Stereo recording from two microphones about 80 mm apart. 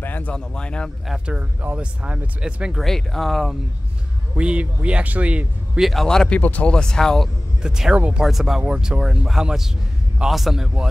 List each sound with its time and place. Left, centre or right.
0.0 s a sound: left
0.3 s speech: centre
1.0 s a man's voice: centre
1.3 s speech: centre
2.8 s a man's voice: centre
4.4 s speech: centre
5.8 s speech: centre
7.6 s speech: centre
7.9 s speech: centre
8.2 s a man's voice: centre